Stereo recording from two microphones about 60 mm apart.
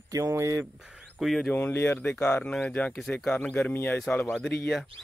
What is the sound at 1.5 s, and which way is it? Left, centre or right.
Speech, left.